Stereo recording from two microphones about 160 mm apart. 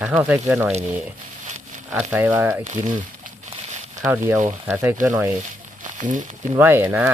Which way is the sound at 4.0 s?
15° right (ahead or behind).